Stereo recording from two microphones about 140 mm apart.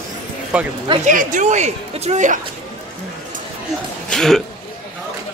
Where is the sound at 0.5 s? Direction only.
5° right (ahead or behind).